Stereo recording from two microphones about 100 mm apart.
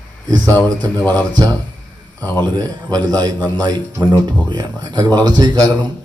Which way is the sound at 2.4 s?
40° right (ahead or behind).